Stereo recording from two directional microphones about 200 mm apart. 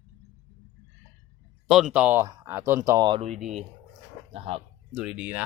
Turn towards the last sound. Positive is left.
turn(degrees=-5)  # may be behind; listen again after turning